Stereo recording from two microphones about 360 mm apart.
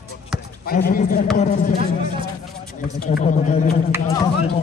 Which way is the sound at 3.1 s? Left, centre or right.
Centre.